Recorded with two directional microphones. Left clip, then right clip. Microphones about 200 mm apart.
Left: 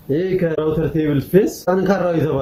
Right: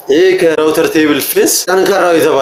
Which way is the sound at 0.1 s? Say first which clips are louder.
Right 11 dB; 50° right (ahead or behind).